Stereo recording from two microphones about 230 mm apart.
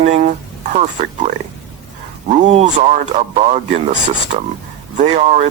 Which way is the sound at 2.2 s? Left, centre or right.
Right.